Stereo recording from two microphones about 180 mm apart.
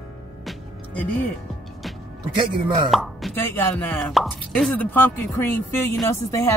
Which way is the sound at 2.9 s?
Centre (ahead or behind).